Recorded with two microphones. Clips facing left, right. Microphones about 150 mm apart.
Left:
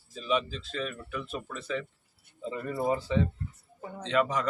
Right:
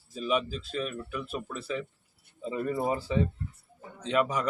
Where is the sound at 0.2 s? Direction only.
10° right (ahead or behind).